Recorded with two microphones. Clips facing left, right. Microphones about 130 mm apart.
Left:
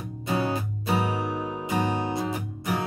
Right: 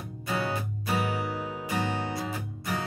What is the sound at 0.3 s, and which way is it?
Music, 25° left (ahead or behind).